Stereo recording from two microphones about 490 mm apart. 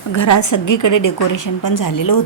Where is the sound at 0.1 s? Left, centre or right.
Left.